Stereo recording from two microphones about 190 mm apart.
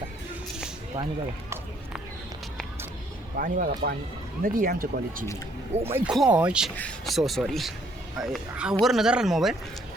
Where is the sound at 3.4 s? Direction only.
50° right (ahead or behind).